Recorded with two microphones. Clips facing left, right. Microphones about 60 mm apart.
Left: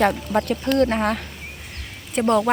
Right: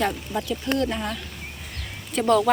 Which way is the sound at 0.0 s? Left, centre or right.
Left.